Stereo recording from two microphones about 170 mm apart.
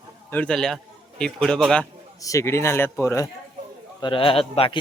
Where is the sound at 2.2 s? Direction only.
15° left (ahead or behind).